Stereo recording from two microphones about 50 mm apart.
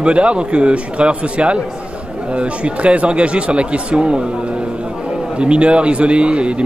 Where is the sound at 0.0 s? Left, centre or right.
Right.